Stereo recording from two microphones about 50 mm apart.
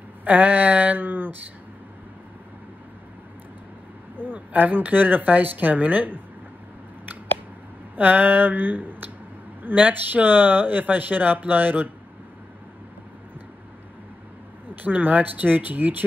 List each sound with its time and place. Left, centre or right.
0.2 s speech: right
4.2 s speech: right
7.9 s speech: right
14.8 s speech: right